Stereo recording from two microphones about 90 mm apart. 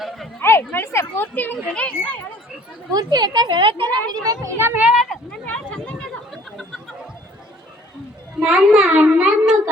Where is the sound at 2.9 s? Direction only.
50° right (ahead or behind).